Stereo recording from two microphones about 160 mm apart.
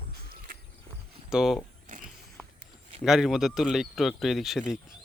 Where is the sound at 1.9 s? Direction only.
55° right (ahead or behind).